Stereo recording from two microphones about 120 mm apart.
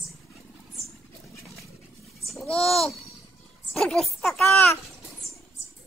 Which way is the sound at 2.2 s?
5° left (ahead or behind).